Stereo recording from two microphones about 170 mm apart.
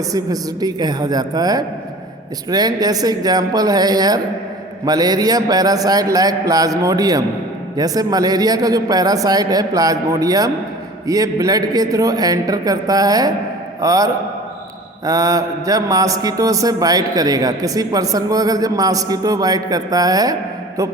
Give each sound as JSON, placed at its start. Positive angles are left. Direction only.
{"t": 0.1, "sound": "a man's voice", "side_deg": -20}